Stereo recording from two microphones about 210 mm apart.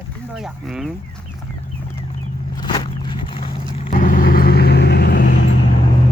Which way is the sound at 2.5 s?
20° left (ahead or behind).